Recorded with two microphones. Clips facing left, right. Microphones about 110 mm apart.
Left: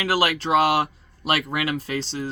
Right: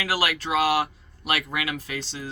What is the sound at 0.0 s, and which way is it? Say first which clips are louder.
Speech: left 4 dB; 30° left (ahead or behind).